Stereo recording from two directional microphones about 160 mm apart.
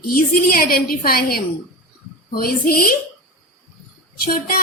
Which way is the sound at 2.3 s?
65° left (ahead or behind).